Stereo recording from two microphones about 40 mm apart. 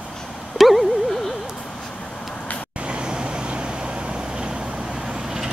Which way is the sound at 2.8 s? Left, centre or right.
Right.